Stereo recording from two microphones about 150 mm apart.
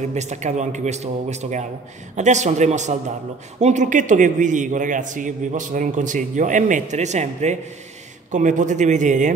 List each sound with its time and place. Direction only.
0.1 s a man's voice: 50° right (ahead or behind)